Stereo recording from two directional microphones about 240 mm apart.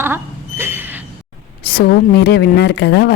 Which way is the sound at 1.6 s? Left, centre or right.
Left.